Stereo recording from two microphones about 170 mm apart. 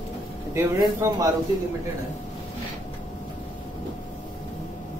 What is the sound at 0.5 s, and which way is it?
Speech, 20° right (ahead or behind).